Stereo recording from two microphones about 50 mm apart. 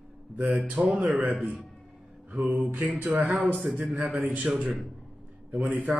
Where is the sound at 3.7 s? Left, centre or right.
Right.